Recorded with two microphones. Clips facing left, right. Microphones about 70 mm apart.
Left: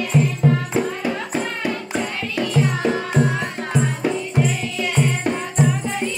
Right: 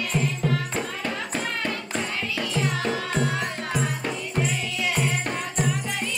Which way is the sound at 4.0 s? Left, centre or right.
Centre.